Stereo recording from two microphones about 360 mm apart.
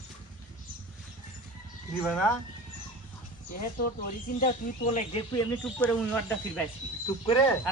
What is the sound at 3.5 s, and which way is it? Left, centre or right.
Speech, left.